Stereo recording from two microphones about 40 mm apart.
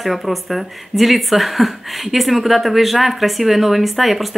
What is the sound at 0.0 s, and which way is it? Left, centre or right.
Speech, centre.